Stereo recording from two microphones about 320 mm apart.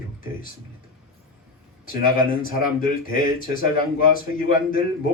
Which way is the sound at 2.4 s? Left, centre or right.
Left.